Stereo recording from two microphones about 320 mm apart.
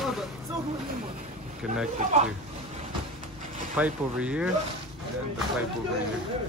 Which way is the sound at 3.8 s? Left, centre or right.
Centre.